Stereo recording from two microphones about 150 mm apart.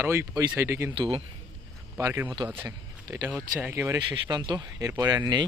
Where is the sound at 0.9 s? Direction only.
35° right (ahead or behind).